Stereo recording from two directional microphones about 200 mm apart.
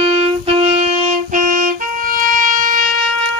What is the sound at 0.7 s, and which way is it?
Music, 35° right (ahead or behind).